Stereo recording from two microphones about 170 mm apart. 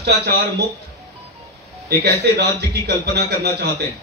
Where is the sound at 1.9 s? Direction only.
75° right (ahead or behind).